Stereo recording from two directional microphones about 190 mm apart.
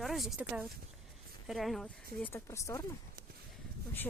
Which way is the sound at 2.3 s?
15° left (ahead or behind).